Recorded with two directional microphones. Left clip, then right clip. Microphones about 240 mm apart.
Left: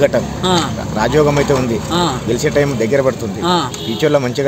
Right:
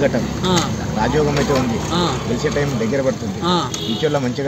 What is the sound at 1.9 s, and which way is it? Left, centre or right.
Speech, centre.